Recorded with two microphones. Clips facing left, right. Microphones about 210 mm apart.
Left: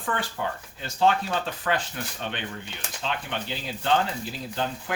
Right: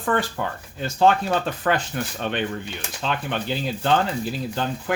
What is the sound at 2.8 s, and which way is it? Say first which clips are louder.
Speech: right 3 dB; 55° right (ahead or behind).